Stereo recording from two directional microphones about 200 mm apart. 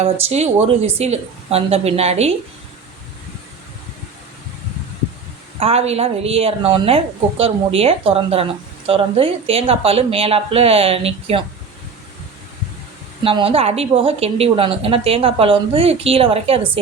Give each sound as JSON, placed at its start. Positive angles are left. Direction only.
{"t": 0.0, "sound": "speech", "side_deg": -30}
{"t": 5.5, "sound": "a woman's voice", "side_deg": -30}
{"t": 13.2, "sound": "a woman's voice", "side_deg": -30}